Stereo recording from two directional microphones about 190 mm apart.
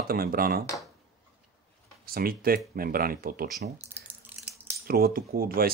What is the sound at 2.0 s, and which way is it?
Speech, 50° right (ahead or behind).